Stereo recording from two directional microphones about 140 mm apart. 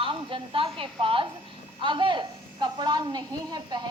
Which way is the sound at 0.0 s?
40° right (ahead or behind).